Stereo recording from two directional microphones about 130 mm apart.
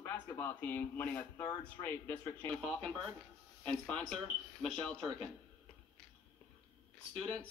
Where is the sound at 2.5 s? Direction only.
5° left (ahead or behind).